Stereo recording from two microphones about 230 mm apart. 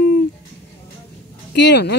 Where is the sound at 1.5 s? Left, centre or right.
Left.